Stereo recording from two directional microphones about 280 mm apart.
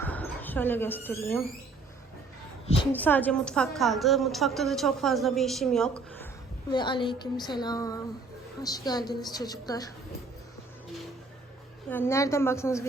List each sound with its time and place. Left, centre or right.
0.0 s speech: centre
2.9 s a woman's voice: centre
6.7 s a woman's voice: centre
11.9 s a woman's voice: centre